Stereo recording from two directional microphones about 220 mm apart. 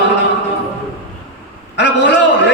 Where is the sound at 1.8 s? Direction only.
50° left (ahead or behind).